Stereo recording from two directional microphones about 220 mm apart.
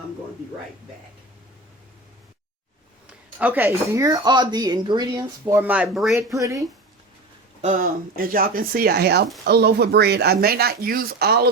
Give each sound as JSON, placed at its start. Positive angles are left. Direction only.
{"t": 3.1, "sound": "speech", "side_deg": -5}
{"t": 6.3, "sound": "speech", "side_deg": -15}
{"t": 7.6, "sound": "speech", "side_deg": -35}